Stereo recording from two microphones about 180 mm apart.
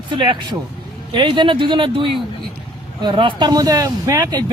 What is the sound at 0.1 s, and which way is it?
Speech, 25° right (ahead or behind).